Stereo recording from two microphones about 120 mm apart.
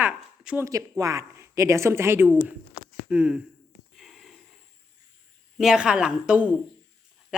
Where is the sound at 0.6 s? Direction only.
25° right (ahead or behind); by 3.4 s 10° right (ahead or behind).